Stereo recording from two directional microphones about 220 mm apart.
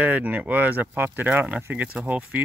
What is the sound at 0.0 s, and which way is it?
Speech, 5° right (ahead or behind).